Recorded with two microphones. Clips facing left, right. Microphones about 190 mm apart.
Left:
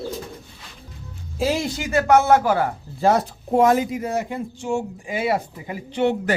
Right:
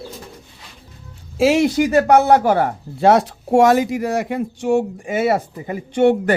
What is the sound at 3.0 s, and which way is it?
Speech, 80° right.